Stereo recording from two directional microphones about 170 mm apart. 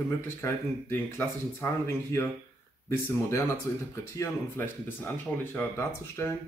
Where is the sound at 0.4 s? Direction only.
15° left (ahead or behind).